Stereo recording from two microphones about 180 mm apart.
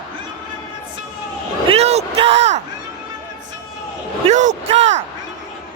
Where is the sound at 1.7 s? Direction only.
35° right (ahead or behind).